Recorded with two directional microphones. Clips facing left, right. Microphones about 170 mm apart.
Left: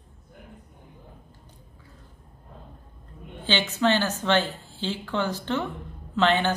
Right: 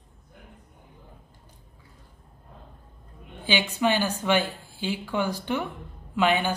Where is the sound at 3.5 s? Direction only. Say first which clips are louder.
Left 1 dB; 10° right (ahead or behind).